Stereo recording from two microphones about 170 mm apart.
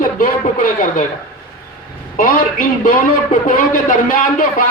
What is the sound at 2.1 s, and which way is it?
A man's voice, 55° left (ahead or behind).